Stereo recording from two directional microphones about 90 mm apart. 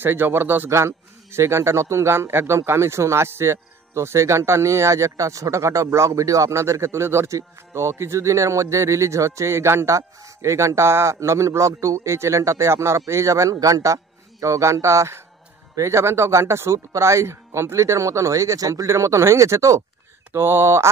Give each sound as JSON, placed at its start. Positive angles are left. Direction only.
{"t": 0.0, "sound": "a man's voice", "side_deg": -25}